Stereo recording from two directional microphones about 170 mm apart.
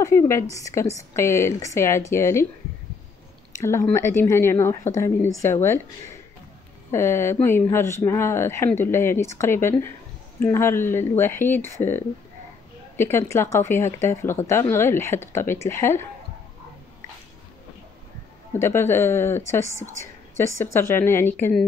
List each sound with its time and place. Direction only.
0.0 s speech: 15° left (ahead or behind)
3.5 s speech: 15° left (ahead or behind)
18.6 s speech: 15° left (ahead or behind)